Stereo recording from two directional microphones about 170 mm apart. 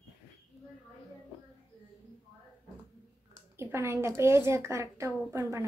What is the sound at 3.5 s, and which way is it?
A woman's voice, 15° right (ahead or behind).